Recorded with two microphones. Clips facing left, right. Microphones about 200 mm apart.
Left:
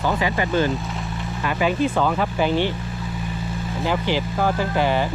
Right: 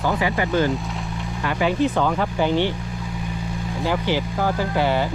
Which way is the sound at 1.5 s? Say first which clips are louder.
Even; 15° left (ahead or behind).